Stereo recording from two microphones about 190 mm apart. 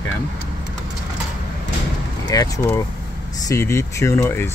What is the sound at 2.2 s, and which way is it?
Speech, 20° left (ahead or behind).